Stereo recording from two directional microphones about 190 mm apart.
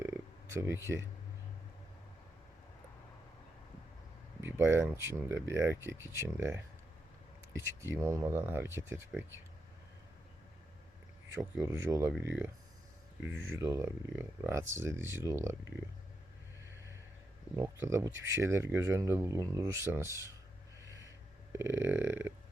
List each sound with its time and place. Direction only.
0.0 s a sound: 15° right (ahead or behind)
4.4 s speech: 10° right (ahead or behind)
7.6 s speech: 15° right (ahead or behind)
11.3 s speech: 15° right (ahead or behind)
13.3 s speech: 90° right
13.6 s speech: 15° right (ahead or behind)
17.6 s speech: 15° right (ahead or behind)
20.8 s owl: 15° right (ahead or behind)
21.5 s speech: 10° right (ahead or behind)